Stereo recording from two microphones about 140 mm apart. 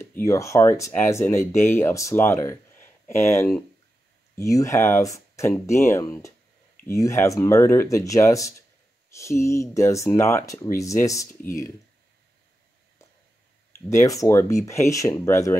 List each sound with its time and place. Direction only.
0.0 s speech: 20° left (ahead or behind)
13.7 s speech: 20° left (ahead or behind)